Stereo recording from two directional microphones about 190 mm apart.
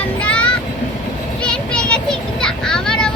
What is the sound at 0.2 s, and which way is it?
Vehicle, 5° left (ahead or behind).